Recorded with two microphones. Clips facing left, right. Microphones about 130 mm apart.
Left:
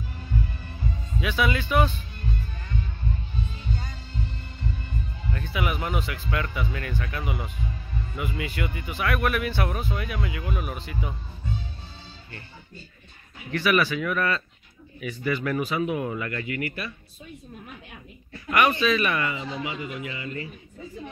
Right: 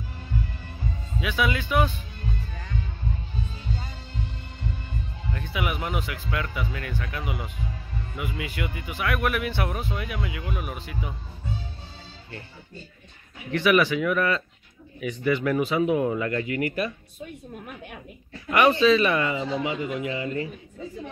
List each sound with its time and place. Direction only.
1.2 s speech: 5° right (ahead or behind)
5.3 s speech: 10° right (ahead or behind)
10.2 s speech: centre (ahead or behind)
13.5 s speech: 15° right (ahead or behind)
16.4 s a man's voice: 40° right (ahead or behind)
18.5 s speech: 25° right (ahead or behind)
19.5 s a man's voice: 45° right (ahead or behind)